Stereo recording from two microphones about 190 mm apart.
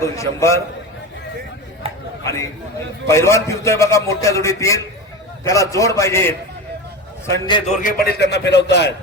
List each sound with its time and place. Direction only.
0.0 s a man's voice: 15° left (ahead or behind)
1.8 s a sound: 30° right (ahead or behind)
2.2 s a man's voice: 15° left (ahead or behind)
7.8 s a man's voice: 50° left (ahead or behind); by 8.9 s 65° left (ahead or behind)